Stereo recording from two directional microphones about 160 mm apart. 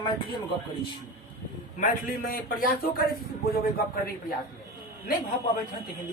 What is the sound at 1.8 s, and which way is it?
Speech, 55° left (ahead or behind).